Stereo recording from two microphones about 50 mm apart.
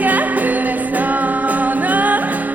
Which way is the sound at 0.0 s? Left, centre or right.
Right.